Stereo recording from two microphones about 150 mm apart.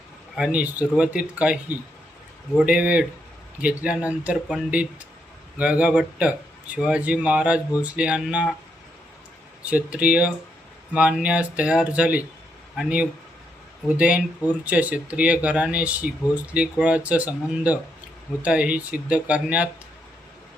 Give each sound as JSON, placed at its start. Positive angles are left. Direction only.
{"t": 0.3, "sound": "speech", "side_deg": -5}
{"t": 2.6, "sound": "speech", "side_deg": -5}
{"t": 9.6, "sound": "speech", "side_deg": -10}